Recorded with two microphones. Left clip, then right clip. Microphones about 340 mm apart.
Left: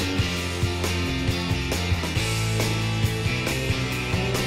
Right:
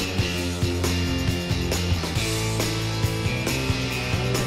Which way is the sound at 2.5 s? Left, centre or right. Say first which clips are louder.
Even; centre.